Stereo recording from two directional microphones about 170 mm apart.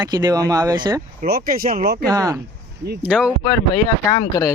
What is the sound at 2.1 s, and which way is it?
Speech, 20° right (ahead or behind).